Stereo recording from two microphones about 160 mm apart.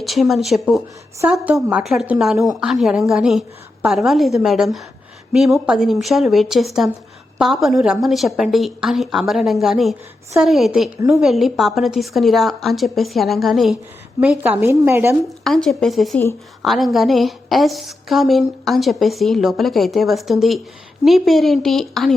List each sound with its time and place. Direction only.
0.0 s a woman's voice: centre (ahead or behind)
15.4 s a woman's voice: centre (ahead or behind)